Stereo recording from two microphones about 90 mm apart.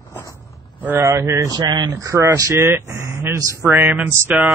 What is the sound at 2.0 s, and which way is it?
Speech, 35° right (ahead or behind).